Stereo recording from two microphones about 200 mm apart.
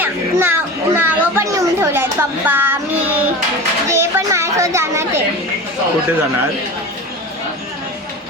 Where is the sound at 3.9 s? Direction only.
15° right (ahead or behind).